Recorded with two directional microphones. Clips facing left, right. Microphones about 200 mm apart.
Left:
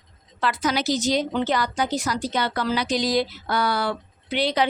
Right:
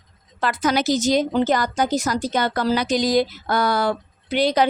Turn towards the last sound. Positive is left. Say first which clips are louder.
# right 4 dB
turn(degrees=-45)  # may be behind; listen again after turning